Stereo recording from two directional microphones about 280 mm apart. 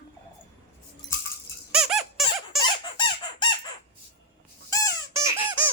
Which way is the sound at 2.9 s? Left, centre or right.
Centre.